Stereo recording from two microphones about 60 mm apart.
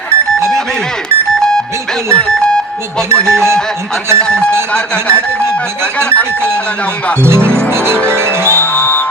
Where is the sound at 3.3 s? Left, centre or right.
Right.